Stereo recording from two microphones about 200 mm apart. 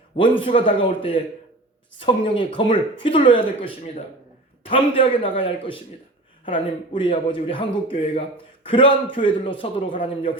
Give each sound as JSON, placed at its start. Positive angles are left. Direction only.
{"t": 0.2, "sound": "a man's voice", "side_deg": 25}